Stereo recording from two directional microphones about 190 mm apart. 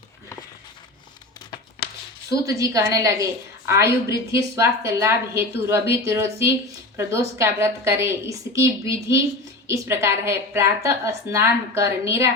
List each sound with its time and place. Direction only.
2.3 s speech: 15° right (ahead or behind)